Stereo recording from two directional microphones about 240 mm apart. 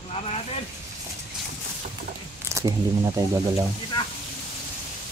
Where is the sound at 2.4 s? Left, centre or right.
Centre.